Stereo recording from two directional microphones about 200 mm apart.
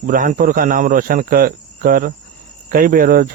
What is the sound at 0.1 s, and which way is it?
Speech, 45° right (ahead or behind).